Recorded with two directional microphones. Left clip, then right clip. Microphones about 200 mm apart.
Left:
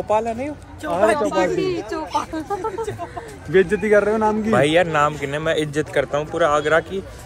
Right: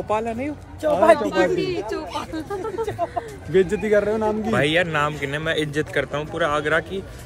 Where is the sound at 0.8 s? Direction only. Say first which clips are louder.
Right 4 dB; 60° right (ahead or behind).